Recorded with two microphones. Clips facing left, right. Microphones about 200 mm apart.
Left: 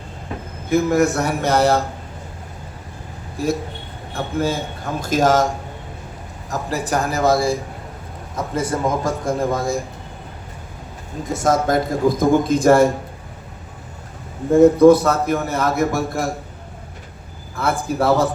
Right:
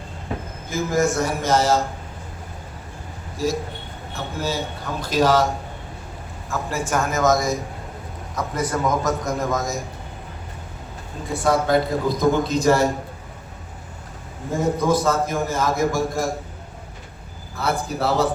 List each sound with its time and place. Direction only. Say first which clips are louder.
0.7 s a man's voice: left 5 dB; 65° left (ahead or behind)
3.3 s a man's voice: left 2 dB; 60° left (ahead or behind)
6.5 s a man's voice: left 2 dB; 35° left (ahead or behind)
11.3 s a man's voice: left 1 dB; 45° left (ahead or behind)
14.5 s a man's voice: left 11 dB; 60° left (ahead or behind)
17.6 s a man's voice: left 3 dB; 50° left (ahead or behind)